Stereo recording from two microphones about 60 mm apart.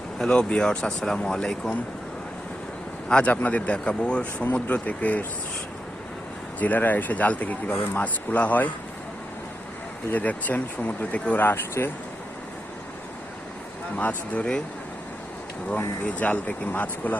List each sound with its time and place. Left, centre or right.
0.2 s speech: centre
3.1 s speech: centre
6.6 s speech: left
10.1 s speech: left
13.9 s speech: left
16.0 s speech: left